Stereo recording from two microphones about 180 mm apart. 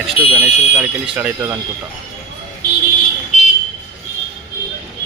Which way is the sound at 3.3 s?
40° left (ahead or behind).